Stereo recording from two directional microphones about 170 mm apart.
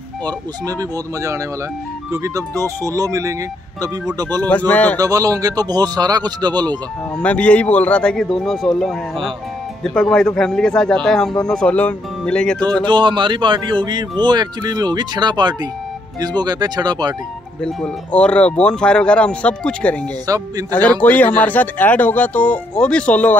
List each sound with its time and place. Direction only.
0.7 s a man's voice: 20° right (ahead or behind)
4.5 s speech: 10° left (ahead or behind)
4.9 s a man's voice: 20° right (ahead or behind)
7.2 s a man's voice: 5° left (ahead or behind)
12.8 s a man's voice: 30° right (ahead or behind)
17.6 s speech: 5° left (ahead or behind)
20.2 s a man's voice: 20° right (ahead or behind)
21.0 s speech: 10° left (ahead or behind)